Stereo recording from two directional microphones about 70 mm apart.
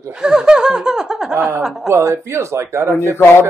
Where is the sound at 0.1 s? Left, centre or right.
Centre.